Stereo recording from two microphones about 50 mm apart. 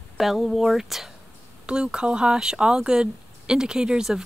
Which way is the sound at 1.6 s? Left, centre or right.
Centre.